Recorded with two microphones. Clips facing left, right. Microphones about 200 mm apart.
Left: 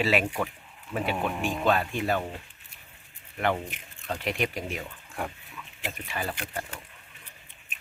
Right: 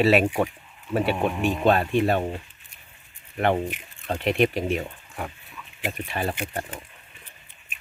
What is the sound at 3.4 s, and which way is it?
Speech, 55° right (ahead or behind).